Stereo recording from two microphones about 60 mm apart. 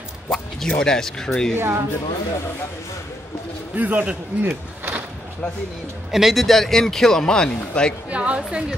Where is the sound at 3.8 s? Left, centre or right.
Right.